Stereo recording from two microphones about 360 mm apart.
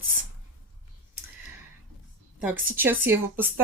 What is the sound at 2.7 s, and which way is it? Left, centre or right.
Speech, centre.